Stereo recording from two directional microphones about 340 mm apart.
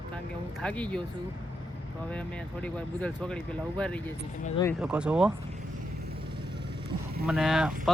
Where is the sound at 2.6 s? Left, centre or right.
Centre.